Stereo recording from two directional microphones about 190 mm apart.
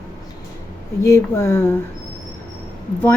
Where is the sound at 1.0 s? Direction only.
15° left (ahead or behind).